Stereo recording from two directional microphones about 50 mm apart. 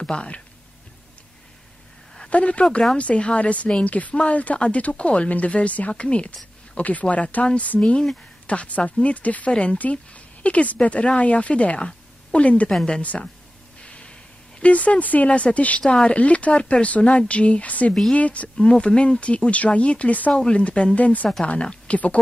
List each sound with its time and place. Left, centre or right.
0.0 s speech: centre
2.2 s speech: left
12.7 s a woman's voice: centre
13.8 s snort: left
14.6 s speech: left
15.8 s speech: centre
18.6 s speech: centre
20.3 s a woman's voice: centre